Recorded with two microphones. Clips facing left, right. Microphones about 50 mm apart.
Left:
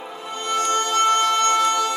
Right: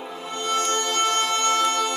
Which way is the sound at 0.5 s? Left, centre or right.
Centre.